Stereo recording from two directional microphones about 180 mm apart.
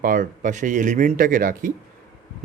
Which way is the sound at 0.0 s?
50° right (ahead or behind).